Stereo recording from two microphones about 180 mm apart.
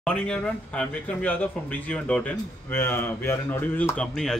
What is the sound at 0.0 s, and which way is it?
Speech, 5° left (ahead or behind).